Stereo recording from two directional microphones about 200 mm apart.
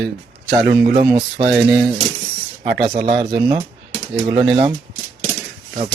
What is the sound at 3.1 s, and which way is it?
Speech, 30° right (ahead or behind).